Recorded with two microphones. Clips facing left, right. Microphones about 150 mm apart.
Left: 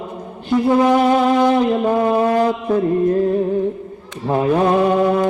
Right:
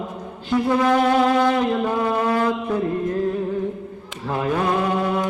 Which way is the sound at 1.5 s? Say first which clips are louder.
Left 5 dB; 30° left (ahead or behind).